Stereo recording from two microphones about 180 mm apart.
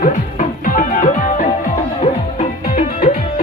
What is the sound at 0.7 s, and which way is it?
Music, 50° left (ahead or behind).